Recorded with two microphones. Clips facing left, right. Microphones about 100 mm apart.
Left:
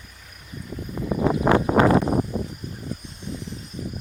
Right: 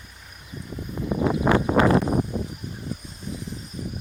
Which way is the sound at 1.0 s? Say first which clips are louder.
Left 1 dB; 25° left (ahead or behind).